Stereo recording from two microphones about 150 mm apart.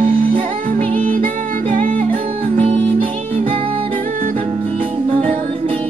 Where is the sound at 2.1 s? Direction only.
40° right (ahead or behind).